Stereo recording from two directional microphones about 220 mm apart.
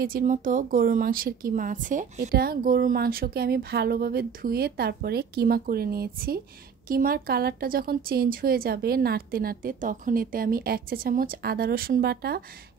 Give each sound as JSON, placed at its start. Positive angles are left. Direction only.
{"t": 0.0, "sound": "speech", "side_deg": -40}